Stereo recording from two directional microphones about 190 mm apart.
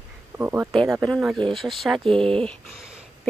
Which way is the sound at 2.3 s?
Centre (ahead or behind).